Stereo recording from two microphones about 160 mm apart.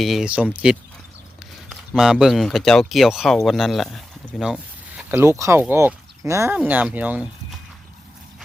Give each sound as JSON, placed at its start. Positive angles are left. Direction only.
{"t": 0.0, "sound": "speech", "side_deg": 0}
{"t": 5.2, "sound": "speech", "side_deg": -15}